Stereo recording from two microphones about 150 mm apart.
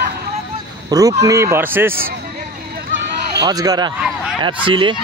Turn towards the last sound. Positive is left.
turn(degrees=-35)  # may be behind; listen again after turning